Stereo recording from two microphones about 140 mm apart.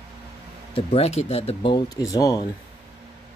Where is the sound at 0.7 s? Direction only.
45° left (ahead or behind).